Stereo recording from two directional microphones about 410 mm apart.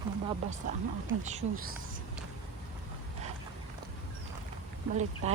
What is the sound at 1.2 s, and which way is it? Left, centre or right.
Speech, centre.